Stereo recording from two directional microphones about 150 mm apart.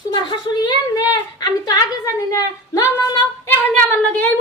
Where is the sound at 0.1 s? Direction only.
30° left (ahead or behind).